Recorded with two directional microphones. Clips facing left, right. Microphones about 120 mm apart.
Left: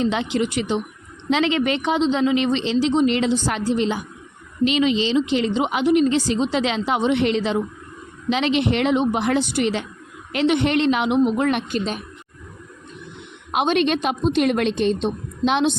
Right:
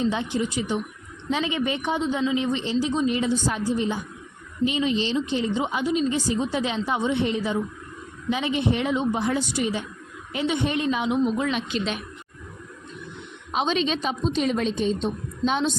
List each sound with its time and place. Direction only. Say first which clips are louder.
0.0 s a woman's voice: left 3 dB; 90° left
2.8 s a woman's voice: left 6 dB; 75° left (ahead or behind); by 12.0 s 45° left (ahead or behind)
13.5 s a woman's voice: left 5 dB; 65° left (ahead or behind)